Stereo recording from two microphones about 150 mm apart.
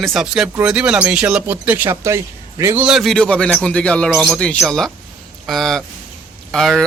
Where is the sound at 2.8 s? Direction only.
Centre (ahead or behind).